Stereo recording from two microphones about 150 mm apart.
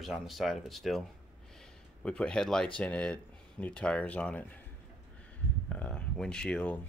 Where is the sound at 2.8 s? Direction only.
10° left (ahead or behind).